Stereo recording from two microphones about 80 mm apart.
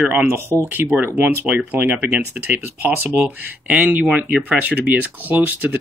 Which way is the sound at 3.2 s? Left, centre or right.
Centre.